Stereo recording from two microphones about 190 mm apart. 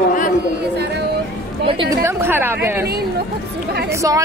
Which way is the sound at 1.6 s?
30° right (ahead or behind).